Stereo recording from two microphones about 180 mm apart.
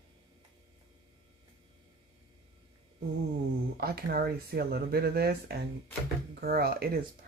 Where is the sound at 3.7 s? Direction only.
60° right (ahead or behind).